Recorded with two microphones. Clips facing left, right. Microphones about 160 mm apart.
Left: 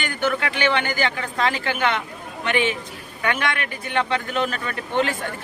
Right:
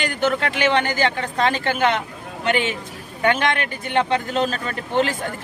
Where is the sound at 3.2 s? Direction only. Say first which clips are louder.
Right 5 dB; 25° right (ahead or behind).